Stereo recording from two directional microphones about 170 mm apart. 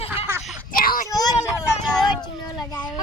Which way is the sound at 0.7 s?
55° left (ahead or behind).